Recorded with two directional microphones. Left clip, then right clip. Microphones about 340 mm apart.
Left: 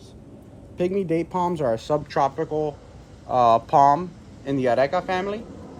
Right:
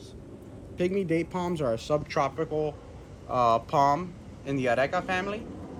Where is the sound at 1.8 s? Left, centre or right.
Left.